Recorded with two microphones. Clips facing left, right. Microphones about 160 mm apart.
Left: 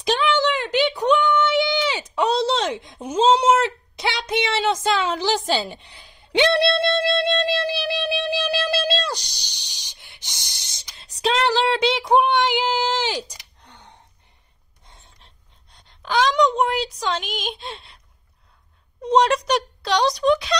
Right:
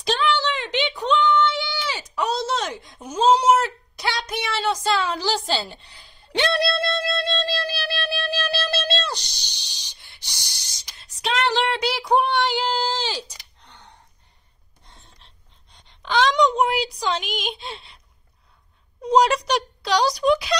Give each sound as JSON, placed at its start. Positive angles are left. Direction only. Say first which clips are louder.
{"t": 0.0, "sound": "a sound", "louder": "left 2 dB", "side_deg": 15}
{"t": 3.1, "sound": "a woman's voice", "louder": "left 1 dB", "side_deg": 25}
{"t": 7.2, "sound": "music", "louder": "left 4 dB", "side_deg": 15}
{"t": 9.8, "sound": "a sound", "louder": "left 1 dB", "side_deg": 15}
{"t": 11.8, "sound": "speech", "louder": "left 3 dB", "side_deg": 15}
{"t": 16.0, "sound": "a woman's voice", "louder": "even", "side_deg": 5}
{"t": 19.0, "sound": "a woman's voice", "louder": "even", "side_deg": 0}